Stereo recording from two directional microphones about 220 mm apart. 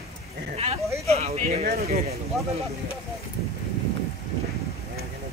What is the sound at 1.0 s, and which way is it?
Speech, 30° right (ahead or behind).